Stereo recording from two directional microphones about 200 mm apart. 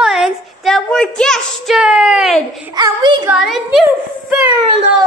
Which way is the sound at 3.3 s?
Centre (ahead or behind).